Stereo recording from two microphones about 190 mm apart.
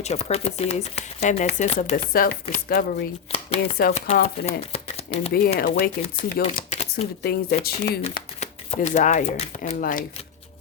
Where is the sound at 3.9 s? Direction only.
40° left (ahead or behind).